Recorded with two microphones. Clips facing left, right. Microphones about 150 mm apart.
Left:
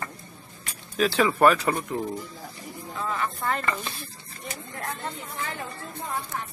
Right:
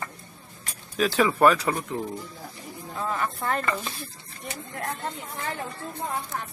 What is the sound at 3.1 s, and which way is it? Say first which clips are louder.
Speech: even; 40° right (ahead or behind).